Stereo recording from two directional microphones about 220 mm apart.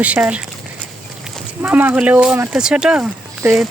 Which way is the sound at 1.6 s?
10° right (ahead or behind).